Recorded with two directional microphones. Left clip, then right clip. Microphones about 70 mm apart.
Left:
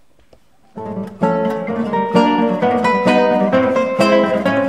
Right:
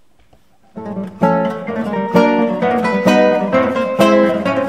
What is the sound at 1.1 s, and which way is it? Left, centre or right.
Music, left.